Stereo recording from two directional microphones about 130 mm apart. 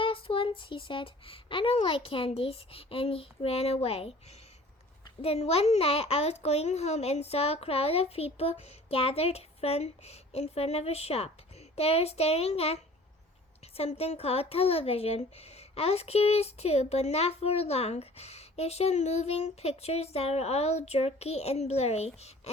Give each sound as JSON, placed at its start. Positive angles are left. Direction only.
{"t": 0.0, "sound": "speech", "side_deg": 45}
{"t": 5.2, "sound": "speech", "side_deg": 50}